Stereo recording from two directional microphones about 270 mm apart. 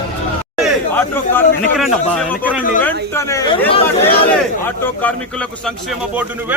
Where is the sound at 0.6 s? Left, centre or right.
Centre.